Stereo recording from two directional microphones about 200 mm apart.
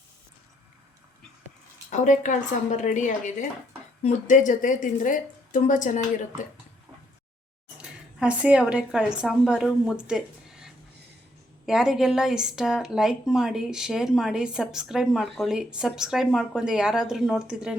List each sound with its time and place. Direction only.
1.9 s speech: 40° left (ahead or behind)
7.8 s a woman's voice: 5° right (ahead or behind)